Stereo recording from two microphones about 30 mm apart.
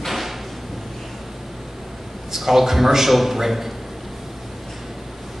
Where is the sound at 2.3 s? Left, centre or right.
Centre.